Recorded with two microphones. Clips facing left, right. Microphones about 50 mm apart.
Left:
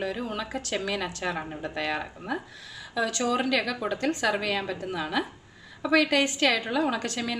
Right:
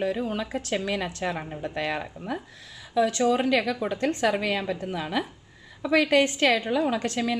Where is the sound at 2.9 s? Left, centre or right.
Centre.